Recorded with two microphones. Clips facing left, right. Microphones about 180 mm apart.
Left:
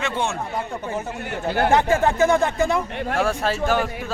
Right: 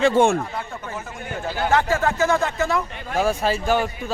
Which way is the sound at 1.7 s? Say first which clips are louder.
Left 1 dB; 20° left (ahead or behind).